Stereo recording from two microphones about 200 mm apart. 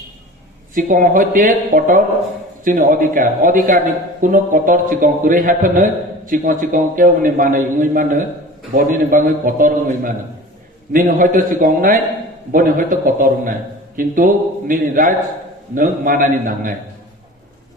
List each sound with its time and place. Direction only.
0.7 s a man's voice: 40° right (ahead or behind)